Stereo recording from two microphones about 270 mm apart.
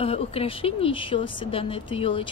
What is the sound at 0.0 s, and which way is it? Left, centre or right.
A woman's voice, left.